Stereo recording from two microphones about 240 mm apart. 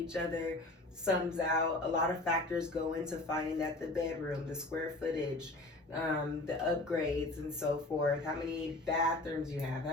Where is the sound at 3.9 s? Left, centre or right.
Centre.